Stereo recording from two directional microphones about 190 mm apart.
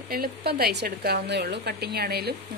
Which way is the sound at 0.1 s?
55° right (ahead or behind).